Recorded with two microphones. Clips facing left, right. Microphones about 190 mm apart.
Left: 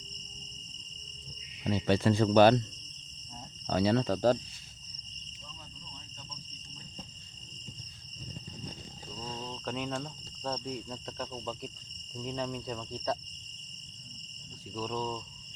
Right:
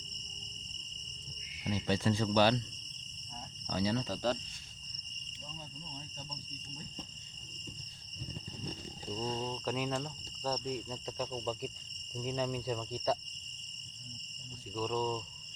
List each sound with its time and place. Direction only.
1.6 s speech: 60° left (ahead or behind)
3.7 s speech: 65° left (ahead or behind)
9.1 s speech: 30° right (ahead or behind)
9.6 s speech: 5° right (ahead or behind)
14.8 s speech: centre (ahead or behind)